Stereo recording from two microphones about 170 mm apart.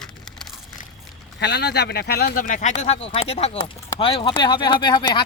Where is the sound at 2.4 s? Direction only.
45° left (ahead or behind).